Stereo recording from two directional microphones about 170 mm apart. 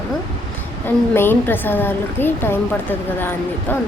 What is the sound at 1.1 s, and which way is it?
Speech, 10° left (ahead or behind).